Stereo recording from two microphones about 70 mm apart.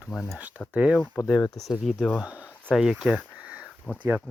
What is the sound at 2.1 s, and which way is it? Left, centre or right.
Speech, centre.